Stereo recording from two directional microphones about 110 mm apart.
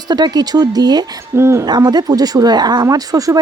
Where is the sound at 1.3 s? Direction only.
25° right (ahead or behind).